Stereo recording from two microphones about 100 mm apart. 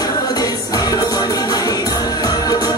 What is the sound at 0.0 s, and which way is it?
Music, 40° left (ahead or behind).